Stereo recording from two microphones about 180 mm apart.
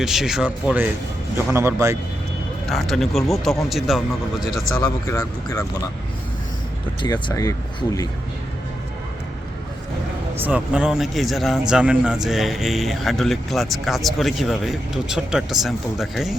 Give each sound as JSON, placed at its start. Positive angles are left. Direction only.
{"t": 0.0, "sound": "a man's voice", "side_deg": 0}
{"t": 2.6, "sound": "a man's voice", "side_deg": 0}
{"t": 4.8, "sound": "speech", "side_deg": 15}
{"t": 7.0, "sound": "speech", "side_deg": 25}
{"t": 10.3, "sound": "a man's voice", "side_deg": -10}